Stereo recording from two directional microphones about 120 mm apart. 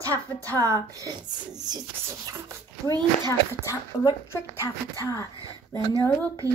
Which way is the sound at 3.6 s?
25° left (ahead or behind).